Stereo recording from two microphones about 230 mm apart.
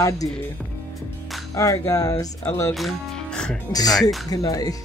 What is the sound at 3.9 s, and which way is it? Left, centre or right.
Music, centre.